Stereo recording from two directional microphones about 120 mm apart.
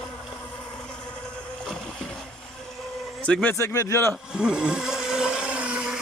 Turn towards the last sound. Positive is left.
turn(degrees=-10)  # may be behind; listen again after turning